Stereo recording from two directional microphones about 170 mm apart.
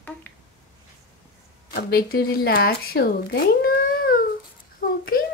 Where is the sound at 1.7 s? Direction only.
65° left (ahead or behind).